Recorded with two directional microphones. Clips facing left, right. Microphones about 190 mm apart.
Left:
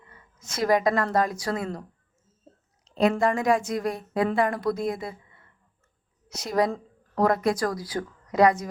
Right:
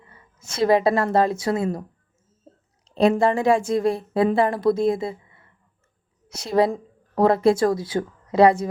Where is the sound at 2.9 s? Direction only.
30° right (ahead or behind).